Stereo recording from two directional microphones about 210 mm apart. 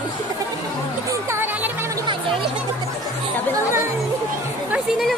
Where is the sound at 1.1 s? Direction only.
10° right (ahead or behind).